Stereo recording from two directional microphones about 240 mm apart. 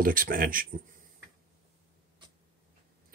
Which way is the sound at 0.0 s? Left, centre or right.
Right.